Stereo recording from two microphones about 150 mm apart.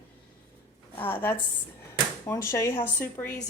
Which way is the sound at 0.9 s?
15° left (ahead or behind).